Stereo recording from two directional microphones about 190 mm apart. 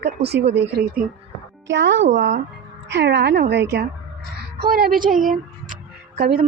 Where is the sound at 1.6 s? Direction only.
70° right (ahead or behind); by 5.3 s 45° right (ahead or behind).